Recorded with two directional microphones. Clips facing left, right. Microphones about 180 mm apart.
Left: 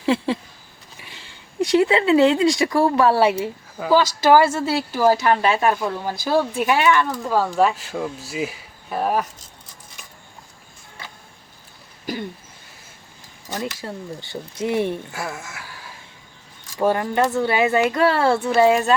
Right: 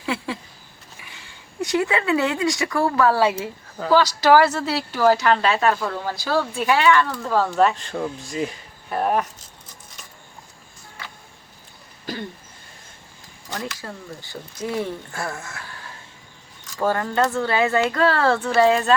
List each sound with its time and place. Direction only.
0.0 s a sound: 30° left (ahead or behind)
1.7 s speech: 25° left (ahead or behind)
3.8 s speech: 10° left (ahead or behind)
4.0 s speech: 25° left (ahead or behind)
4.4 s speech: 10° left (ahead or behind)
13.5 s speech: 20° left (ahead or behind)
15.1 s speech: 10° left (ahead or behind)